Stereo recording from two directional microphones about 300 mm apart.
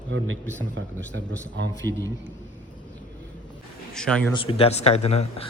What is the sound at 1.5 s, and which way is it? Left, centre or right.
Speech, right.